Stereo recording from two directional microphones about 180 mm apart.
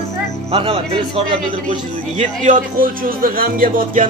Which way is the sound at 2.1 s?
40° right (ahead or behind).